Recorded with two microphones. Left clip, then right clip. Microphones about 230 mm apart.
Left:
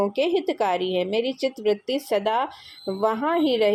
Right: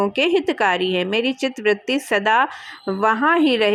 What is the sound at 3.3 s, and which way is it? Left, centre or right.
Speech, right.